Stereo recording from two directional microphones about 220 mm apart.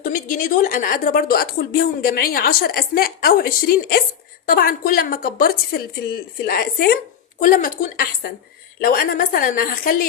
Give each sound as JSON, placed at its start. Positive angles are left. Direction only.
{"t": 0.0, "sound": "a woman's voice", "side_deg": 40}